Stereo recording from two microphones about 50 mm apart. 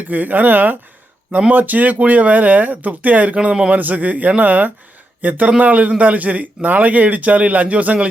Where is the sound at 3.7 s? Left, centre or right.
Right.